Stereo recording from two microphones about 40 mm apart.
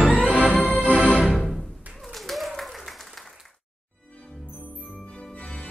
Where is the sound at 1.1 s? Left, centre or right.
Centre.